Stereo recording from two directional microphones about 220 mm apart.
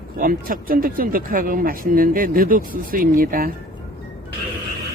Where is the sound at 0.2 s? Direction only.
40° right (ahead or behind).